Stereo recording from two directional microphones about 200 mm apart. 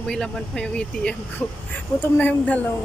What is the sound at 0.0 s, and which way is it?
Speech, 5° left (ahead or behind).